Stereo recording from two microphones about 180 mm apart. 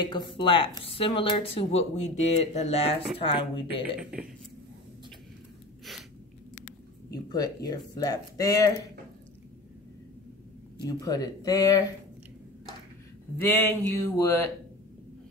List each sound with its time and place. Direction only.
0.0 s speech: 25° left (ahead or behind)
4.0 s a man's voice: 5° right (ahead or behind)
7.1 s speech: 20° left (ahead or behind)
10.9 s speech: 20° left (ahead or behind)
13.4 s speech: 10° left (ahead or behind)